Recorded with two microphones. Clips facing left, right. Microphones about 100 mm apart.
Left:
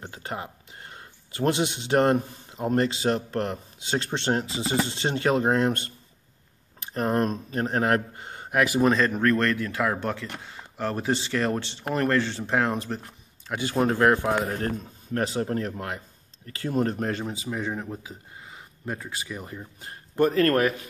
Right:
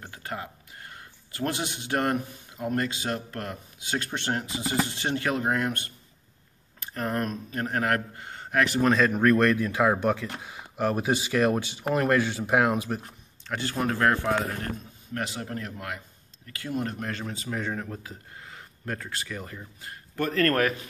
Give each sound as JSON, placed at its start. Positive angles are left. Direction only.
{"t": 0.0, "sound": "speech", "side_deg": 25}
{"t": 9.0, "sound": "speech", "side_deg": -10}
{"t": 13.4, "sound": "speech", "side_deg": 10}
{"t": 15.1, "sound": "speech", "side_deg": 35}
{"t": 17.4, "sound": "speech", "side_deg": 5}
{"t": 19.8, "sound": "a sound", "side_deg": 30}
{"t": 20.2, "sound": "speech", "side_deg": 20}